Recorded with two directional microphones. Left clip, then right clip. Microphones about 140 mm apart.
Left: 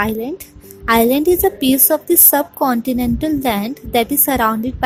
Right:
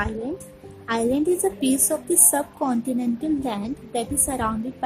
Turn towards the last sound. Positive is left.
turn(degrees=55)  # may be behind; listen again after turning